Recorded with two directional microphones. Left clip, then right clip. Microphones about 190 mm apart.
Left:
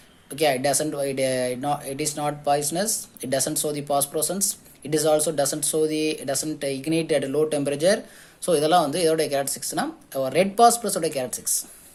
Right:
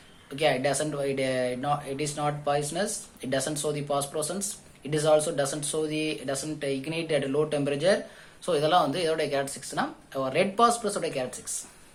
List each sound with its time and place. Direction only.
0.3 s speech: 45° left (ahead or behind)